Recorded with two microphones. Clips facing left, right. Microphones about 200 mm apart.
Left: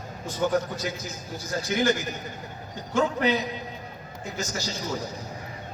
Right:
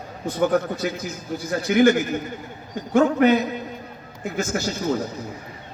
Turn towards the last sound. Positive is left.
turn(degrees=-55)  # may be behind; listen again after turning